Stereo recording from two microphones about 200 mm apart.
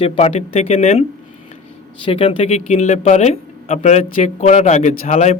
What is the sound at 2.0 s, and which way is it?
Speech, 25° left (ahead or behind).